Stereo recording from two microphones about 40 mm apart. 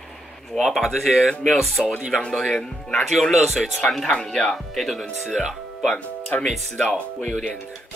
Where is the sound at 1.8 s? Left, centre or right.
Centre.